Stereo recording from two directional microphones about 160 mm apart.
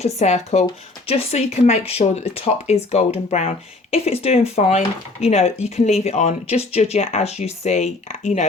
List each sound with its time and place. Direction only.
0.2 s speech: 45° left (ahead or behind)